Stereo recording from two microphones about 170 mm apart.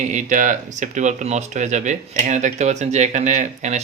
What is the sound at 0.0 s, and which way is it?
Speech, 45° right (ahead or behind).